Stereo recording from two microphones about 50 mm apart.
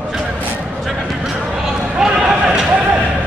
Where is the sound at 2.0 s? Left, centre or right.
Centre.